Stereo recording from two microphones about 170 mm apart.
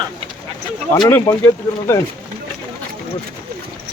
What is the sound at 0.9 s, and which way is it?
Speech, 20° left (ahead or behind).